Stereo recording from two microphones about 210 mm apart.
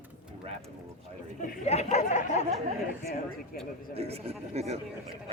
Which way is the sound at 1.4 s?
35° left (ahead or behind).